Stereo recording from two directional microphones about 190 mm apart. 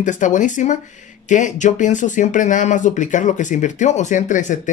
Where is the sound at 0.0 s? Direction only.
40° left (ahead or behind).